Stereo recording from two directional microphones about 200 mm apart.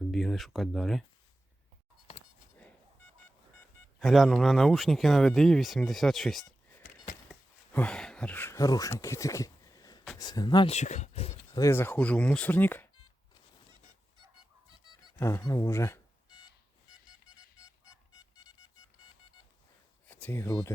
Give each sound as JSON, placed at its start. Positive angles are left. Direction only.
{"t": 0.1, "sound": "speech", "side_deg": 0}
{"t": 4.0, "sound": "speech", "side_deg": 0}
{"t": 7.7, "sound": "speech", "side_deg": 5}
{"t": 11.6, "sound": "speech", "side_deg": 10}
{"t": 15.2, "sound": "speech", "side_deg": 15}
{"t": 20.1, "sound": "speech", "side_deg": 5}